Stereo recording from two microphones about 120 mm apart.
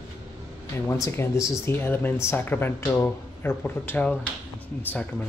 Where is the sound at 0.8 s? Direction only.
25° left (ahead or behind).